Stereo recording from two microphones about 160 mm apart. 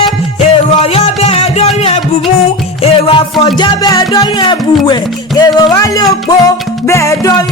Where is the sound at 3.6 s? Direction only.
25° left (ahead or behind).